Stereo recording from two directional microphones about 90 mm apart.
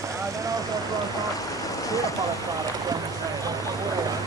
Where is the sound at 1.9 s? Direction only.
40° left (ahead or behind).